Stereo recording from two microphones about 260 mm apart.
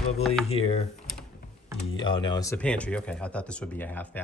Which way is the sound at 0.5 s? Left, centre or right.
Left.